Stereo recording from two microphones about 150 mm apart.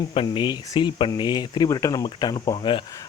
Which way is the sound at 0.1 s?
35° left (ahead or behind).